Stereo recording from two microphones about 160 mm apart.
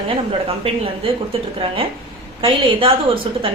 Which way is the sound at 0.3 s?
35° right (ahead or behind).